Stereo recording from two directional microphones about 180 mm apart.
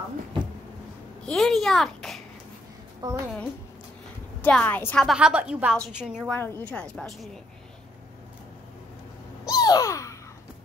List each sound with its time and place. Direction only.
1.2 s a sound: centre (ahead or behind)
3.0 s a woman's voice: 20° right (ahead or behind)
4.4 s a woman's voice: 5° left (ahead or behind)
5.0 s a woman's voice: 5° right (ahead or behind)
6.3 s a woman's voice: 10° left (ahead or behind)
9.5 s a sound: 20° left (ahead or behind)